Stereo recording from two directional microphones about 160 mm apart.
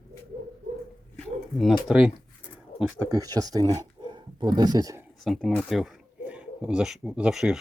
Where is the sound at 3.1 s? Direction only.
20° right (ahead or behind).